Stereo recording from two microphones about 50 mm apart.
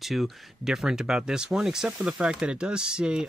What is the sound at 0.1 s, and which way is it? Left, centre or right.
Speech, centre.